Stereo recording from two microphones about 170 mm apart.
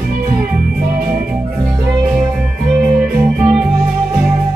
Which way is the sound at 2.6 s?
5° right (ahead or behind).